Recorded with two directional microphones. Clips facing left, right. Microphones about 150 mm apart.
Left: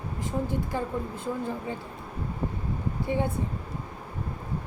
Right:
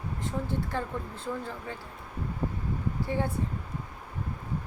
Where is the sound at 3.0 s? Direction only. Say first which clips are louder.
Left 3 dB; 20° left (ahead or behind).